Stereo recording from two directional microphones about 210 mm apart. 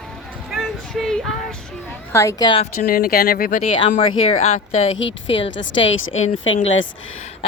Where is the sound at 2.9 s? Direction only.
45° left (ahead or behind).